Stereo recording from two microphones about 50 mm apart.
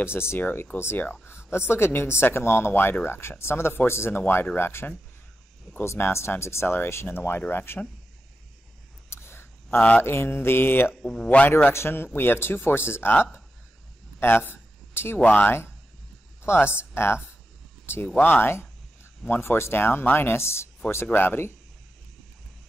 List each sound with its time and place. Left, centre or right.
0.0 s speech: left
5.9 s speech: left
9.1 s a sound: left
10.0 s speech: left
11.0 s speech: centre
11.7 s speech: left
14.2 s a sound: left
15.1 s speech: left
16.4 s speech: left
18.2 s speech: left
19.4 s speech: left
21.2 s speech: left